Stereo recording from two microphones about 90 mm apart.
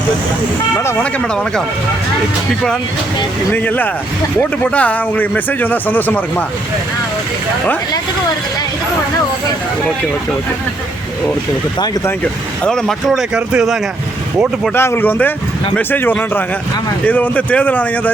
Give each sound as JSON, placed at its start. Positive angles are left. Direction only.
{"t": 3.5, "sound": "speech", "side_deg": 20}
{"t": 12.6, "sound": "speech", "side_deg": 5}
{"t": 14.8, "sound": "a man's voice", "side_deg": 25}